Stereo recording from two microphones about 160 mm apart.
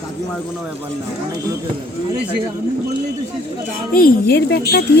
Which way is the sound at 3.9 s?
65° left (ahead or behind).